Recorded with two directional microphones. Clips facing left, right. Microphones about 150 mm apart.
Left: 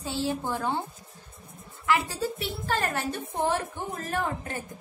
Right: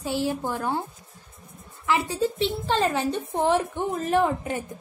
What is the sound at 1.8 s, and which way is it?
A woman's voice, 20° right (ahead or behind).